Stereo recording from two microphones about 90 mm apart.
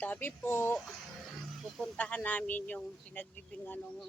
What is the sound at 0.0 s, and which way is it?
Speech, 20° left (ahead or behind).